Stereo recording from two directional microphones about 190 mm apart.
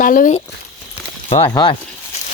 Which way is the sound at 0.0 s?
45° left (ahead or behind).